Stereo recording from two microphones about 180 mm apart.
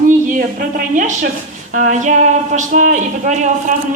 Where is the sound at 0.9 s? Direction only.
50° right (ahead or behind).